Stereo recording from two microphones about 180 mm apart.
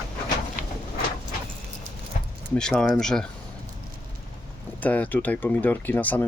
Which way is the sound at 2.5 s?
5° left (ahead or behind).